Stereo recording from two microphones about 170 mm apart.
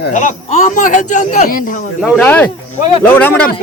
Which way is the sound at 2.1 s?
10° left (ahead or behind).